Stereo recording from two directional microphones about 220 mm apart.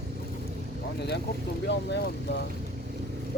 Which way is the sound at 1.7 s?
50° left (ahead or behind).